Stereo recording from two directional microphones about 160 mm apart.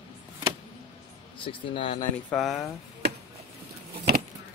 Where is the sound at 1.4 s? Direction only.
30° left (ahead or behind).